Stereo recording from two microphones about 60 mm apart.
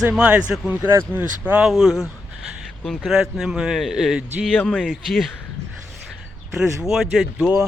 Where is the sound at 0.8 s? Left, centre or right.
Right.